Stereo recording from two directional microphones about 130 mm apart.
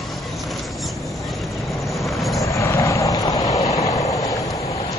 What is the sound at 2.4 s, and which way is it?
Vehicle, 20° left (ahead or behind).